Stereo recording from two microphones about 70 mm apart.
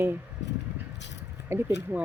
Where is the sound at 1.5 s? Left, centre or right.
Right.